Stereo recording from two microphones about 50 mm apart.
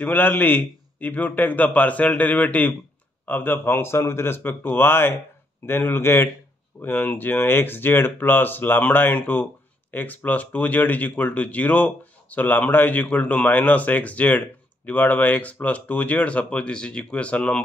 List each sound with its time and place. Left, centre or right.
0.0 s speech: left
4.4 s speech: left